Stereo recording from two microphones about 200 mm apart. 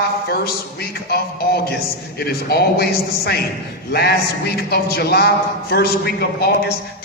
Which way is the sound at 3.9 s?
55° left (ahead or behind).